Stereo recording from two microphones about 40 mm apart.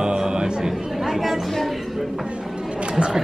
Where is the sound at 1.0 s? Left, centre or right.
Centre.